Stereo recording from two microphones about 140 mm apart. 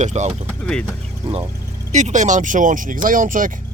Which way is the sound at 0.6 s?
10° left (ahead or behind).